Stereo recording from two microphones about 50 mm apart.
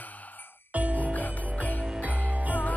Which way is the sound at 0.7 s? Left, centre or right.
Right.